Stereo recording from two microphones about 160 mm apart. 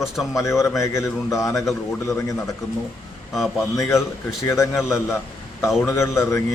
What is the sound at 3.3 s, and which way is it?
Speech, centre (ahead or behind).